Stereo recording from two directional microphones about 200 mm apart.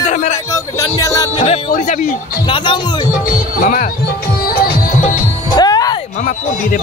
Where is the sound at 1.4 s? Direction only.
35° left (ahead or behind).